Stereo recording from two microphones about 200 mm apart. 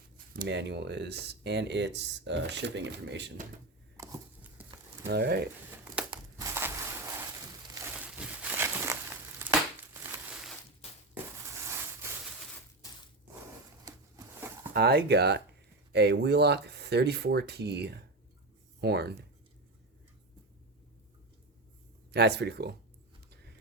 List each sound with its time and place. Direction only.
0.3 s speech: 60° right (ahead or behind)
3.9 s a sound: 15° right (ahead or behind)
5.0 s speech: 55° right (ahead or behind)
6.1 s crushing: 15° right (ahead or behind)
7.8 s crumpling: 10° right (ahead or behind)
11.1 s a sound: 15° right (ahead or behind)
13.8 s a sound: 20° right (ahead or behind)
14.7 s speech: 55° right (ahead or behind)
22.1 s speech: 55° right (ahead or behind)